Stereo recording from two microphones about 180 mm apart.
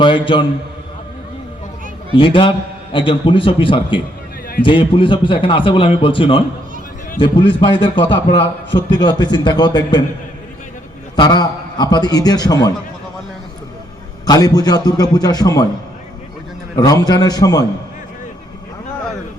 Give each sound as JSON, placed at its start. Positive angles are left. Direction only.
{"t": 0.0, "sound": "a man's voice", "side_deg": 25}
{"t": 2.1, "sound": "a man's voice", "side_deg": 30}
{"t": 11.2, "sound": "a man's voice", "side_deg": 25}
{"t": 14.3, "sound": "a man's voice", "side_deg": 20}
{"t": 16.7, "sound": "a man's voice", "side_deg": 20}